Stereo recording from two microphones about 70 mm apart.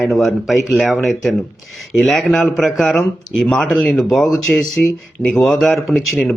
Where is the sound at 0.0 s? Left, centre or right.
Centre.